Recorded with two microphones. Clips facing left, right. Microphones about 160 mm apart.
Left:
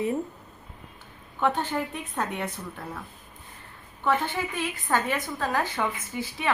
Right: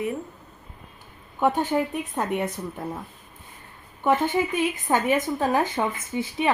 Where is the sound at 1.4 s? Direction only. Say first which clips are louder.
Right 4 dB; 10° right (ahead or behind).